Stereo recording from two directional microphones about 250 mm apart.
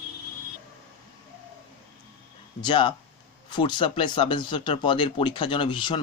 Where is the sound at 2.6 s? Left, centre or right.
Centre.